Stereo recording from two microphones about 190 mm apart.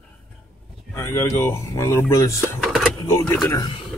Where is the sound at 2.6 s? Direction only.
Centre (ahead or behind).